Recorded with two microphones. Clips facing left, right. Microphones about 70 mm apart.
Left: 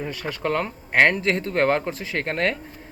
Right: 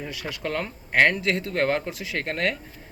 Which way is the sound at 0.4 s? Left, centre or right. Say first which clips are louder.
Left 5 dB; centre.